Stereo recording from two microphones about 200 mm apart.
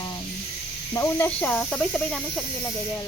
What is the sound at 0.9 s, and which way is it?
Speech, 10° left (ahead or behind).